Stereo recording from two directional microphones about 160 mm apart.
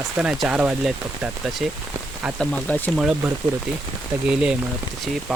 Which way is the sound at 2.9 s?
5° right (ahead or behind).